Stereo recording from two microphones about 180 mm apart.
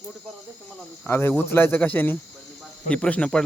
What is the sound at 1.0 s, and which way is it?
Speech, 15° left (ahead or behind).